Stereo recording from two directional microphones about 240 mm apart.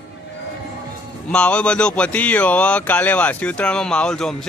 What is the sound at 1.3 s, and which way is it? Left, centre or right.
Speech, centre.